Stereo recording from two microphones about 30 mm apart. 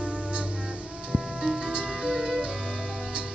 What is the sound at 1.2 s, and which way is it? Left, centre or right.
Music, right.